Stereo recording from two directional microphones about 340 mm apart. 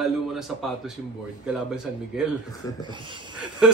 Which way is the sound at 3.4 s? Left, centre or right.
Centre.